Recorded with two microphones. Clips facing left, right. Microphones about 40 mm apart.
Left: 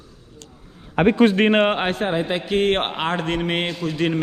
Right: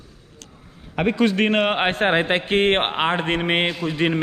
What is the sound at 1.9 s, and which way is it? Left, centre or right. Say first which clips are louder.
Speech: right 3 dB; right.